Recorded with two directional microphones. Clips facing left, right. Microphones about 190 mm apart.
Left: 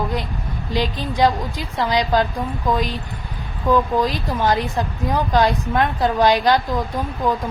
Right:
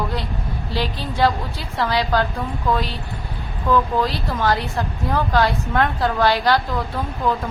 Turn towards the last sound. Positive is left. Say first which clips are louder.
# left 1 dB
turn(degrees=15)  # may be behind; listen again after turning